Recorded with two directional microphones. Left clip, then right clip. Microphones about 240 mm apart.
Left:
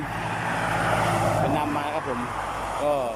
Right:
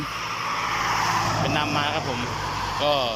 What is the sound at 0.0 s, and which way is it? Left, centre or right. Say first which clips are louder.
Vehicle: even; left.